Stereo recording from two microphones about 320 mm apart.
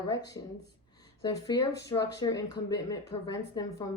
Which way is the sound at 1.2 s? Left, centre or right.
Centre.